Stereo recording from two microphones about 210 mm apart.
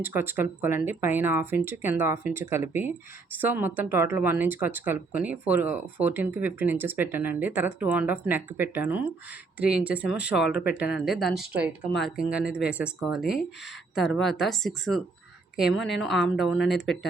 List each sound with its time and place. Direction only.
0.0 s a woman's voice: 10° right (ahead or behind)